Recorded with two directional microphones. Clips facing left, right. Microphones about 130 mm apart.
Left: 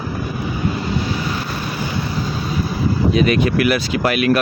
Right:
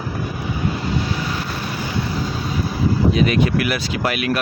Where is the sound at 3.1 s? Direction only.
65° left (ahead or behind).